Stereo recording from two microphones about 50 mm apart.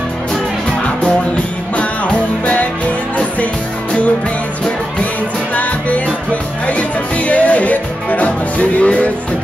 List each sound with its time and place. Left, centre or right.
1.8 s music: left
5.5 s music: left